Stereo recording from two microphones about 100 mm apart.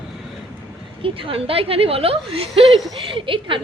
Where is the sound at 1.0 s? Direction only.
65° right (ahead or behind).